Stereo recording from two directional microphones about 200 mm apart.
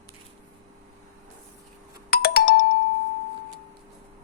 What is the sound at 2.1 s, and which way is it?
Music, 50° left (ahead or behind).